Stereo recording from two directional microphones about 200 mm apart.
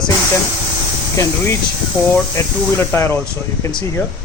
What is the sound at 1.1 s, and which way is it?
Speech, 15° left (ahead or behind).